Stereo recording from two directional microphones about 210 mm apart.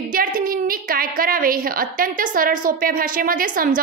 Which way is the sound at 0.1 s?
40° right (ahead or behind).